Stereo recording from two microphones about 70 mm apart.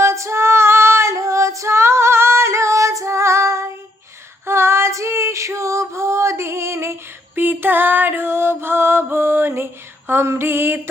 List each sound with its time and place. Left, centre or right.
0.0 s female singing: right
7.3 s music: right
10.1 s female singing: right